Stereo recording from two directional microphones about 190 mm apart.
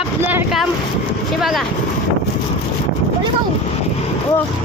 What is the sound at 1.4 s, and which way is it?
Speech, centre (ahead or behind).